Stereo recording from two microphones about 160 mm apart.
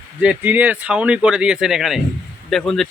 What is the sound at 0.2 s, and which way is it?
Speech, 10° right (ahead or behind).